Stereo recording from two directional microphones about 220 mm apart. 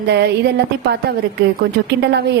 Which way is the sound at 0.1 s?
50° right (ahead or behind).